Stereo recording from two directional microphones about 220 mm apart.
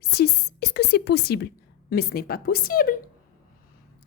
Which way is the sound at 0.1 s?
45° left (ahead or behind).